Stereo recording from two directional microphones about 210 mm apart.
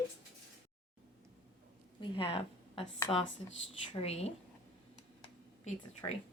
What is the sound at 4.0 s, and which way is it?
Speech, 30° left (ahead or behind).